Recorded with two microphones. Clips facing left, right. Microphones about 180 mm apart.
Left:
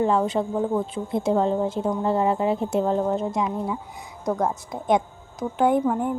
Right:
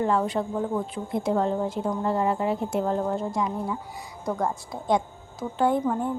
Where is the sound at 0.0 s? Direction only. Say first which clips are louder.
Left 3 dB; 25° left (ahead or behind).